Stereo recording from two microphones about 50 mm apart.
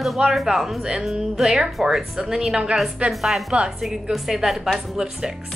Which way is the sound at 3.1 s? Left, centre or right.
Centre.